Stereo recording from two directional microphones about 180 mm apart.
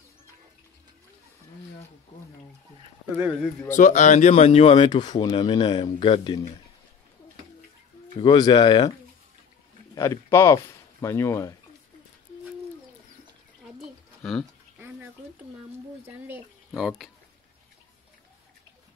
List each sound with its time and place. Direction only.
3.2 s speech: 5° right (ahead or behind)
3.7 s speech: 45° left (ahead or behind); by 6.4 s 30° left (ahead or behind)
8.2 s speech: 25° left (ahead or behind)
9.9 s speech: 15° left (ahead or behind)
14.8 s a sound: 10° right (ahead or behind)
16.1 s speech: 10° right (ahead or behind)